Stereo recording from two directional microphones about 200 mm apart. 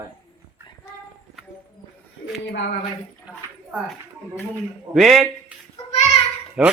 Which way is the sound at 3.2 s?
5° right (ahead or behind).